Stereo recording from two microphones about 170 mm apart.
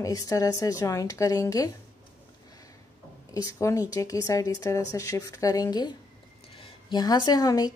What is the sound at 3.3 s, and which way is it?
A woman's voice, 20° left (ahead or behind).